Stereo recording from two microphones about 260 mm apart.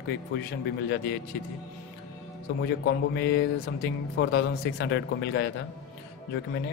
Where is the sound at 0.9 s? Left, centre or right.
Left.